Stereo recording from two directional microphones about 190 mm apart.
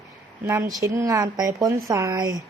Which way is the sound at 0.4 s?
15° right (ahead or behind).